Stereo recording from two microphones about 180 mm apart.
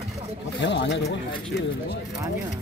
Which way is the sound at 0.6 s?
80° left.